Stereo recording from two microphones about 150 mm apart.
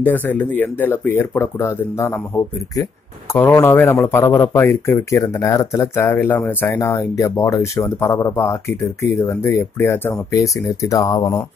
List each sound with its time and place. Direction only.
0.0 s speech: 10° left (ahead or behind)
3.3 s speech: 15° left (ahead or behind)